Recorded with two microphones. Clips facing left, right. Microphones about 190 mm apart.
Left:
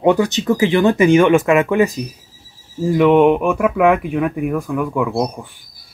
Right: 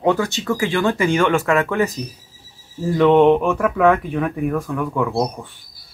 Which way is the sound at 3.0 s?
10° left (ahead or behind).